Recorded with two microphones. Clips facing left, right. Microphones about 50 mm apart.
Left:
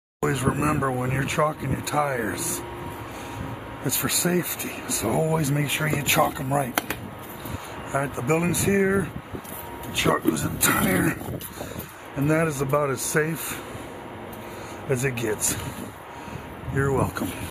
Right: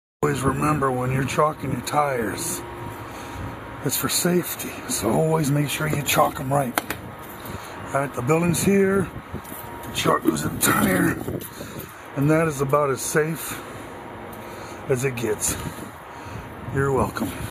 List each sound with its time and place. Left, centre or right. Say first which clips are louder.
0.2 s a man's voice: right 2 dB; centre
1.1 s speech: right 3 dB; centre
3.8 s speech: right 2 dB; centre
10.2 s speech: right 2 dB; centre
12.2 s speech: right 3 dB; centre
14.9 s speech: right 2 dB; centre
16.7 s speech: right 2 dB; centre